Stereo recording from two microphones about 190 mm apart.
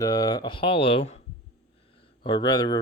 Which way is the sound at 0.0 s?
20° left (ahead or behind).